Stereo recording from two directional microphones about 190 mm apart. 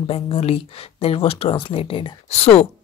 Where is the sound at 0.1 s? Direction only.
30° left (ahead or behind).